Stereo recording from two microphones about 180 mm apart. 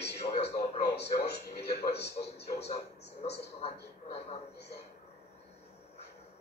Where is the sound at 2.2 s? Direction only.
35° left (ahead or behind).